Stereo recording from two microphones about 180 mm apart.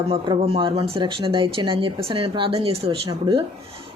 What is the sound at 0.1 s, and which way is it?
Speech, 30° right (ahead or behind).